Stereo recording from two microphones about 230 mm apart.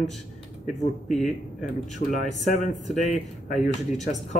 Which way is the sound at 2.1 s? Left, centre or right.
Left.